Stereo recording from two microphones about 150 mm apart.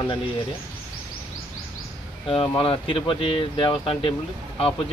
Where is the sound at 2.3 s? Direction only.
35° left (ahead or behind).